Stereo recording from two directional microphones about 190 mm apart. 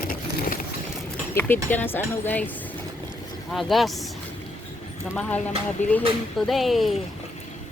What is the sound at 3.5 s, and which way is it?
Speech, centre (ahead or behind).